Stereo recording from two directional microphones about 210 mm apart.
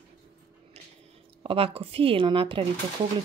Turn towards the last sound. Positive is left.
turn(degrees=-25)  # may be behind; listen again after turning